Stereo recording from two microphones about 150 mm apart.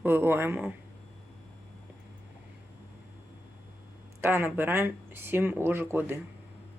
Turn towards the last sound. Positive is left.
turn(degrees=-15)  # may be behind; listen again after turning